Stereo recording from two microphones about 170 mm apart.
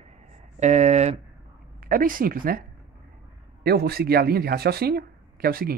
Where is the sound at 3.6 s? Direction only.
70° right (ahead or behind).